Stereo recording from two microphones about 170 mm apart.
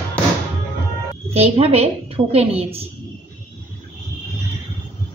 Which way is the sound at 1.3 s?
35° right (ahead or behind).